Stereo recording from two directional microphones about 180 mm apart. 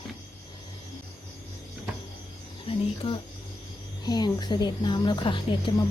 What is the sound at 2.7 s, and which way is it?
Speech, 30° left (ahead or behind).